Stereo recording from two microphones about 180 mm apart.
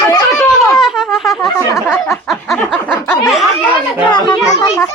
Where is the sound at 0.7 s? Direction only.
Centre (ahead or behind).